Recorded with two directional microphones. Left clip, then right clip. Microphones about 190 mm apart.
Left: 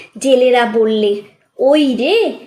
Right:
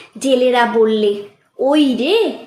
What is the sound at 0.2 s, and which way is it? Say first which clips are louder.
A woman's voice: left 3 dB; 5° left (ahead or behind).